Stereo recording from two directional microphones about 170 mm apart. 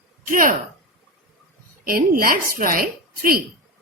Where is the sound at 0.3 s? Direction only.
50° right (ahead or behind).